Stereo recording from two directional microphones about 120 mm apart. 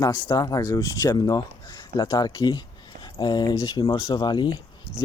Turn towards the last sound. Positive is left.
turn(degrees=40)  # may be behind; listen again after turning